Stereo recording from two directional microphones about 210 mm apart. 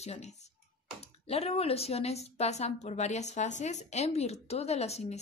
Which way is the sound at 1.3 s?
30° left (ahead or behind).